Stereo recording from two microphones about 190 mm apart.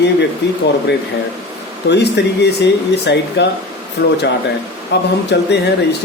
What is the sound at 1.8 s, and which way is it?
Speech, 65° left (ahead or behind).